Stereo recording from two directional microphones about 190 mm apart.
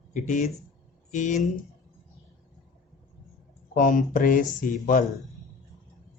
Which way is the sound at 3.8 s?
45° left (ahead or behind).